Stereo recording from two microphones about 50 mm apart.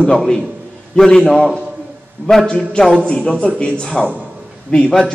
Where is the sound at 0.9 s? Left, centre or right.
Centre.